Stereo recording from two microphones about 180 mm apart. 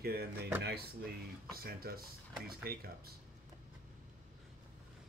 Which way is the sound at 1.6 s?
55° right (ahead or behind).